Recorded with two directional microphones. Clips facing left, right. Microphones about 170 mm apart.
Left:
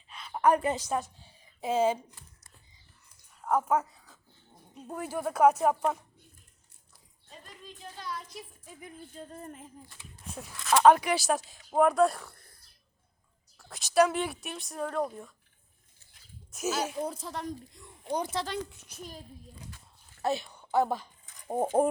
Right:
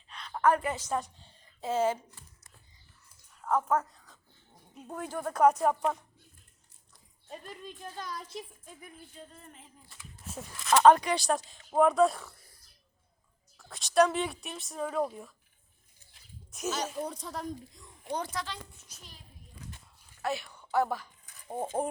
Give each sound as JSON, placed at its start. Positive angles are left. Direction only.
{"t": 0.1, "sound": "a sound", "side_deg": 5}
{"t": 0.8, "sound": "a woman's voice", "side_deg": 10}
{"t": 3.4, "sound": "speech", "side_deg": 10}
{"t": 7.3, "sound": "a sound", "side_deg": -55}
{"t": 9.1, "sound": "music", "side_deg": 45}
{"t": 10.2, "sound": "speech", "side_deg": 0}
{"t": 13.6, "sound": "speech", "side_deg": 0}
{"t": 16.5, "sound": "speech", "side_deg": 5}
{"t": 18.1, "sound": "speech", "side_deg": 10}
{"t": 18.7, "sound": "a child's voice", "side_deg": 75}
{"t": 20.2, "sound": "a sound", "side_deg": 20}
{"t": 21.4, "sound": "speech", "side_deg": 45}